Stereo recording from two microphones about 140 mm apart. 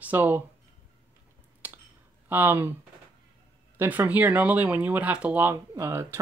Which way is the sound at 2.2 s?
15° right (ahead or behind).